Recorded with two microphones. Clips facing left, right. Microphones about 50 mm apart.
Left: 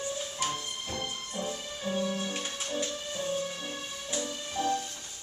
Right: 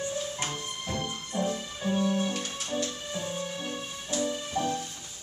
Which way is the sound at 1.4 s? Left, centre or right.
Centre.